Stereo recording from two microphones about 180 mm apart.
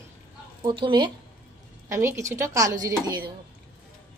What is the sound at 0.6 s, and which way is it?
Speech, 25° right (ahead or behind).